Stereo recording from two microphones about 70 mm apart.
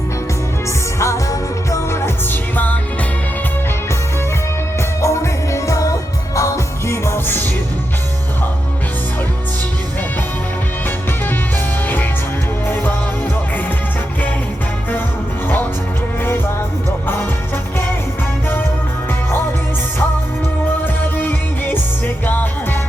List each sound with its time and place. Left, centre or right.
0.9 s music: left
4.8 s music: left
12.6 s music: left
20.8 s music: left